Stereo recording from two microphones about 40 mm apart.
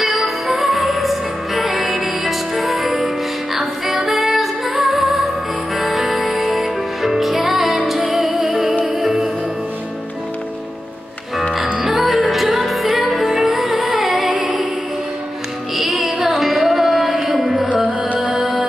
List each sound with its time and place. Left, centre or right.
0.0 s music: centre
11.8 s music: centre
15.7 s music: centre
17.6 s music: right
18.3 s music: centre